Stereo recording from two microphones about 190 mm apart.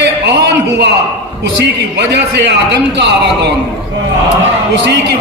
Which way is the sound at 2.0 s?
65° right (ahead or behind).